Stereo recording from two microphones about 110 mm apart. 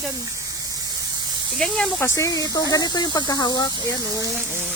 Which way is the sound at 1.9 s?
25° left (ahead or behind).